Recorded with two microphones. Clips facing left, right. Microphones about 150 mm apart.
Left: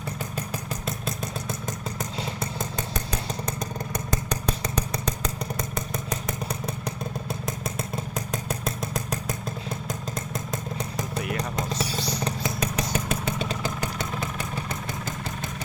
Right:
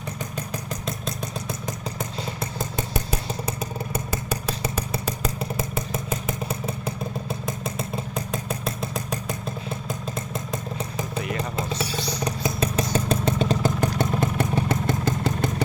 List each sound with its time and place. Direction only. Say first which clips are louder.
0.9 s vehicle: even; centre (ahead or behind)
2.9 s motorcycle: right 3 dB; 5° right (ahead or behind)
10.3 s vehicle: right 1 dB; centre (ahead or behind)
12.2 s motorcycle: right 3 dB; 25° right (ahead or behind)
13.1 s vehicle: right 6 dB; 45° right (ahead or behind); by 15.6 s 70° right (ahead or behind)